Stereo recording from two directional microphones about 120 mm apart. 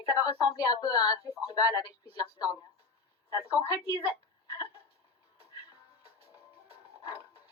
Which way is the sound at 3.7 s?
30° left (ahead or behind).